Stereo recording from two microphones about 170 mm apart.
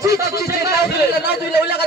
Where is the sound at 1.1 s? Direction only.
75° left (ahead or behind).